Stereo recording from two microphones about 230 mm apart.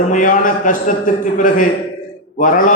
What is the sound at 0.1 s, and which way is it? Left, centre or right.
Speech, left.